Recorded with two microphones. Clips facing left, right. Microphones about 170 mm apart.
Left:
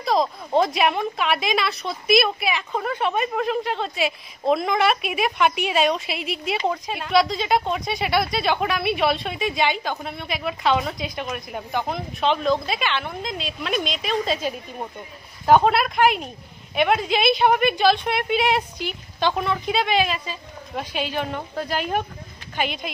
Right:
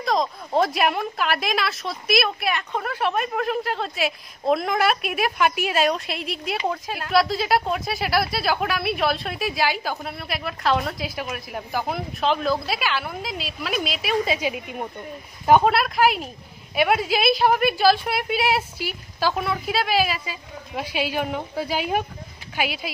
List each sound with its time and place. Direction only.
0.0 s a woman's voice: centre (ahead or behind)